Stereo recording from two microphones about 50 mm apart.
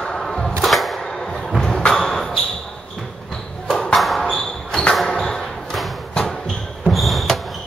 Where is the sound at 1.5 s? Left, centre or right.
Centre.